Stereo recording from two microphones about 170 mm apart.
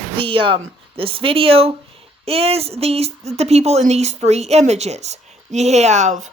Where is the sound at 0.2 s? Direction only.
30° right (ahead or behind).